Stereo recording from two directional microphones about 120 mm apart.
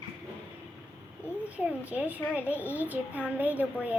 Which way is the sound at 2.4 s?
20° left (ahead or behind).